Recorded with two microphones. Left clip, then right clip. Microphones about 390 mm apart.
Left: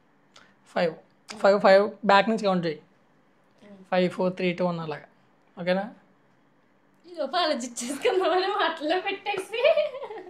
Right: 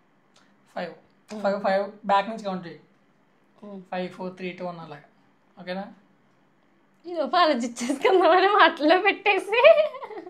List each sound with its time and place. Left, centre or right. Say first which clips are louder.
0.3 s speech: left 6 dB; left
3.9 s speech: left 8 dB; left
7.0 s a woman's voice: right 5 dB; right